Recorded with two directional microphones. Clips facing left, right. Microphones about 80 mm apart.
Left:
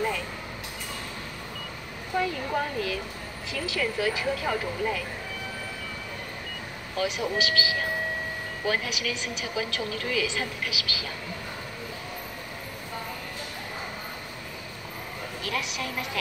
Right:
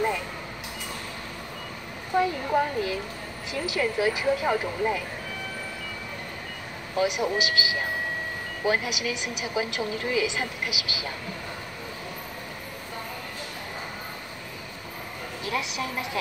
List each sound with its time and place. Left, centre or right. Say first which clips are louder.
2.1 s a woman's voice: right 4 dB; right
7.0 s a woman's voice: right 3 dB; centre
15.4 s a woman's voice: right 2 dB; right